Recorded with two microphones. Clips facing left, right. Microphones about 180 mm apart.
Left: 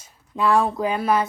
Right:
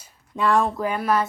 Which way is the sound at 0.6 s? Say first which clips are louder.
Left 2 dB; 20° left (ahead or behind).